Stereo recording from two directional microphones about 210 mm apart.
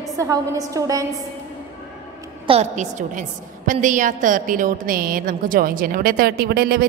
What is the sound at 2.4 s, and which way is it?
A woman's voice, 30° right (ahead or behind).